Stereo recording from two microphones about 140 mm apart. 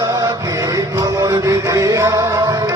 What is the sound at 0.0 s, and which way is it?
Music, 25° right (ahead or behind).